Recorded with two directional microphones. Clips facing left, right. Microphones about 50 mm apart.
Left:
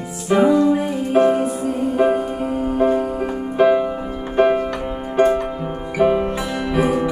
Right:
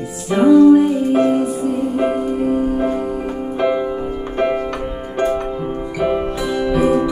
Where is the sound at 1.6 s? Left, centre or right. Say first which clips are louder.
Even; centre.